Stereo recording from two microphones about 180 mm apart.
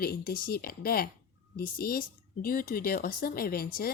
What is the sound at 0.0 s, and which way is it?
Speech, 55° left (ahead or behind).